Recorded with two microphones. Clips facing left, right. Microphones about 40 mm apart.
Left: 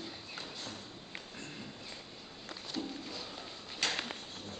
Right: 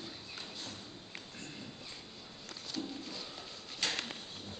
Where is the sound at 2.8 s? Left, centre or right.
Centre.